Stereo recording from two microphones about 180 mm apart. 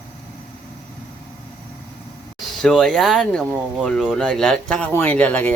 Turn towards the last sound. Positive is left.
turn(degrees=10)  # may be behind; listen again after turning